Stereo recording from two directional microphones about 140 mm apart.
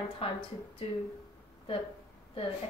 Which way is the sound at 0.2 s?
40° left (ahead or behind).